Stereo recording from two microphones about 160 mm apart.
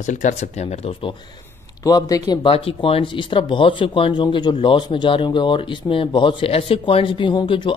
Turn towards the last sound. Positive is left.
turn(degrees=30)  # may be behind; listen again after turning